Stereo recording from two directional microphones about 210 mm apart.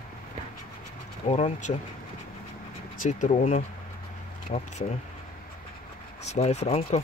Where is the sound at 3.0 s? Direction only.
35° left (ahead or behind).